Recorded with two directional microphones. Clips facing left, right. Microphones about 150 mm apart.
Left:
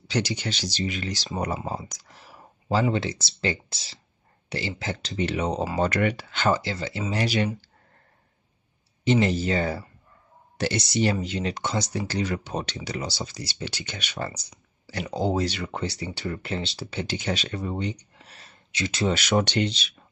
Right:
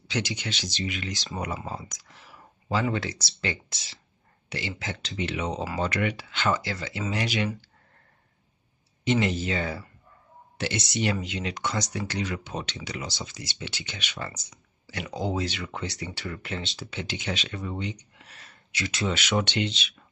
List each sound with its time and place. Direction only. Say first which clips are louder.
0.1 s speech: left 4 dB; 35° left (ahead or behind)
9.0 s speech: left 3 dB; 35° left (ahead or behind)
19.0 s speech: left 4 dB; 45° left (ahead or behind)